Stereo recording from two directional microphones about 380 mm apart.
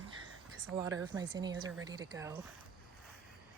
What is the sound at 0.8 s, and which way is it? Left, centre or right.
Speech, centre.